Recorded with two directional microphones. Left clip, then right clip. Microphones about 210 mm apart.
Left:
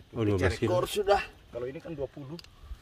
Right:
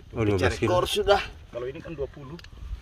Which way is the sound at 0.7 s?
20° right (ahead or behind).